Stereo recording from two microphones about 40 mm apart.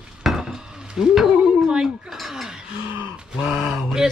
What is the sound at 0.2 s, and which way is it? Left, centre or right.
Dishes, centre.